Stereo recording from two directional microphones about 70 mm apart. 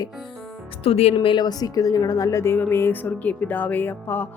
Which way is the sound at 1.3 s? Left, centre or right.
Left.